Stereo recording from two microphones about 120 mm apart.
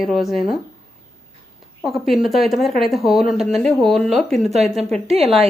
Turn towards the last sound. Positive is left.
turn(degrees=-55)  # may be behind; listen again after turning